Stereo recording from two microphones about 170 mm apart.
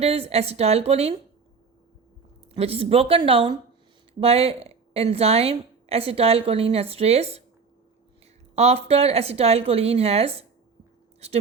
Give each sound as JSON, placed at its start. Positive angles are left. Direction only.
{"t": 0.0, "sound": "a woman's voice", "side_deg": -35}
{"t": 2.5, "sound": "a woman's voice", "side_deg": -35}
{"t": 8.5, "sound": "a woman's voice", "side_deg": -35}